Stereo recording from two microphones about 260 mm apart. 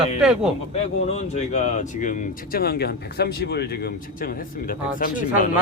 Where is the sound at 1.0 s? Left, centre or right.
Left.